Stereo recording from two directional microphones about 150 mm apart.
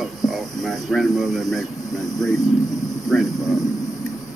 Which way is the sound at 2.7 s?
25° left (ahead or behind).